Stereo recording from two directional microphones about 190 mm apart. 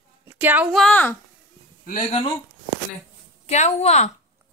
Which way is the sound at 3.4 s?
35° left (ahead or behind).